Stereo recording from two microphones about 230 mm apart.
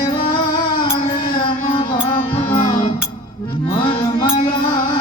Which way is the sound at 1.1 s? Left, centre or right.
Left.